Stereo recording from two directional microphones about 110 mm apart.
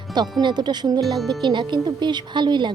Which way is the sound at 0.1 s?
40° right (ahead or behind).